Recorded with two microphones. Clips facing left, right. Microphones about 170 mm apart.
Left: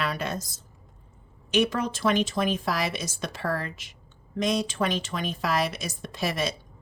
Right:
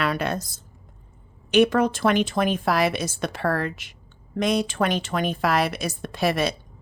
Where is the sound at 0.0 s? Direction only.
65° right (ahead or behind).